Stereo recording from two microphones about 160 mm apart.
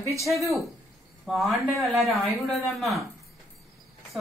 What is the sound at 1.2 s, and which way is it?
Speech, centre (ahead or behind).